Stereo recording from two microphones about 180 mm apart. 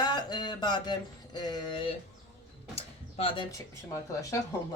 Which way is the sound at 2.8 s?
35° left (ahead or behind).